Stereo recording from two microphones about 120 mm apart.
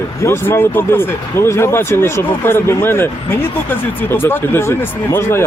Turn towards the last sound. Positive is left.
turn(degrees=20)  # may be behind; listen again after turning